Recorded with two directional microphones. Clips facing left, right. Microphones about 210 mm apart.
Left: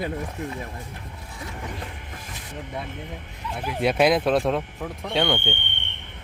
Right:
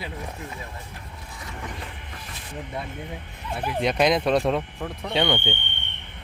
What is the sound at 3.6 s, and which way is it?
Speech, 5° left (ahead or behind).